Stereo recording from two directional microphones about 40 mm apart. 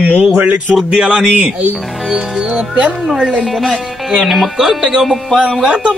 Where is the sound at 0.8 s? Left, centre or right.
Centre.